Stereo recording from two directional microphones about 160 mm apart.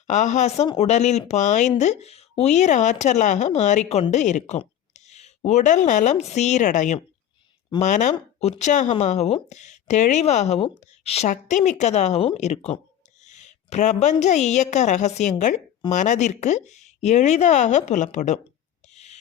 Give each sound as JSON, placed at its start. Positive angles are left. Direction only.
{"t": 0.1, "sound": "a woman's voice", "side_deg": 50}
{"t": 18.9, "sound": "rub", "side_deg": 45}